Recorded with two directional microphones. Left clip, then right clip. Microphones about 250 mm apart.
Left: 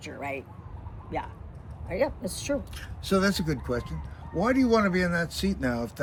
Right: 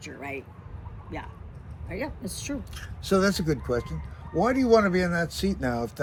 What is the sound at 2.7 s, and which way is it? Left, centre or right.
Speech, centre.